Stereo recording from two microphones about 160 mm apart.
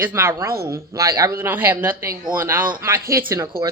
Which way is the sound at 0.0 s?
15° right (ahead or behind).